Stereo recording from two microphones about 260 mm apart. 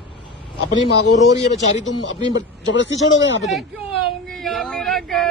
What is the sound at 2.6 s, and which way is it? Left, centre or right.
Speech, left.